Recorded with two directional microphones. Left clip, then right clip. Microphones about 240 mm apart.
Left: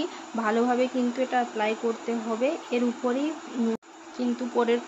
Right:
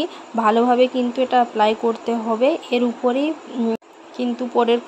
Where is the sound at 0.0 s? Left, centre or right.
Centre.